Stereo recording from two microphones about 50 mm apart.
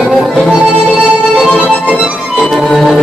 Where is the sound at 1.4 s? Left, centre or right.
Right.